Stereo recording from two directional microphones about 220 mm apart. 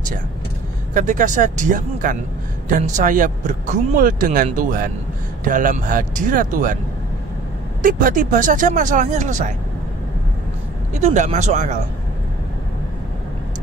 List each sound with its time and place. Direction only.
0.9 s speech: 35° right (ahead or behind)
7.8 s speech: 35° right (ahead or behind)
10.9 s speech: 30° right (ahead or behind)